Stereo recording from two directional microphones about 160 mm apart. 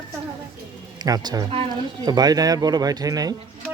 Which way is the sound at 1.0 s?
25° right (ahead or behind).